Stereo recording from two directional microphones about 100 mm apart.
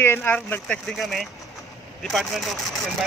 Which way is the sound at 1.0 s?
Centre (ahead or behind).